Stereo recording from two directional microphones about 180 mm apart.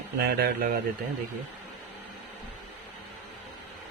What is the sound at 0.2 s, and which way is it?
Speech, 60° right (ahead or behind).